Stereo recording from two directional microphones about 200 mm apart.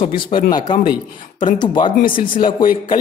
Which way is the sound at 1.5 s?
25° left (ahead or behind).